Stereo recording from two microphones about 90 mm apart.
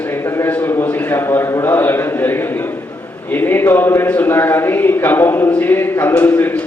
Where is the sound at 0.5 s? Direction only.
25° left (ahead or behind).